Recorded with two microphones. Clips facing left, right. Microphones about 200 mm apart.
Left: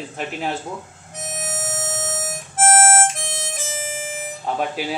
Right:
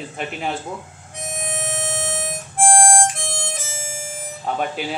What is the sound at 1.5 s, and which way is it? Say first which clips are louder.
Music: right 2 dB; centre (ahead or behind).